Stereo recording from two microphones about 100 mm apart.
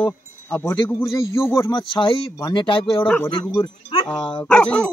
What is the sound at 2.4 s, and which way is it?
Speech, 50° left (ahead or behind).